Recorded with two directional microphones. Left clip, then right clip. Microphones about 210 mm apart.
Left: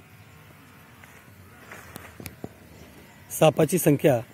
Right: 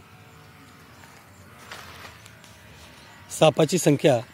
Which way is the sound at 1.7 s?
25° right (ahead or behind).